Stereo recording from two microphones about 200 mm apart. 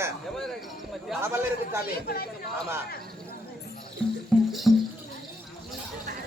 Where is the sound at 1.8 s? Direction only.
50° left (ahead or behind).